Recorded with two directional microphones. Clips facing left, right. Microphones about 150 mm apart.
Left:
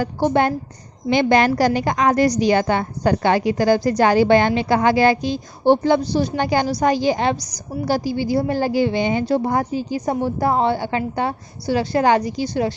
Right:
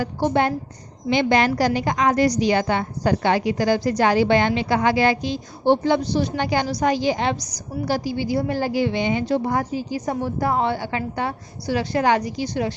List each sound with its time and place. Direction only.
0.0 s a woman's voice: 45° left (ahead or behind)